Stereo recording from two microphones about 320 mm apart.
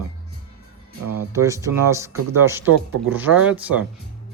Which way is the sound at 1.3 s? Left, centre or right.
Centre.